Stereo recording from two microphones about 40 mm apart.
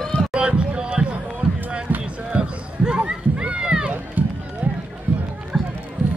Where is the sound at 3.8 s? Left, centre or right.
Right.